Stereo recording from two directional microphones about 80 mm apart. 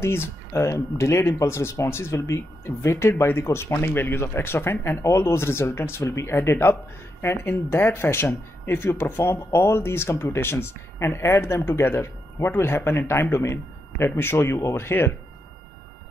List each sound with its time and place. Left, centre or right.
0.0 s speech: left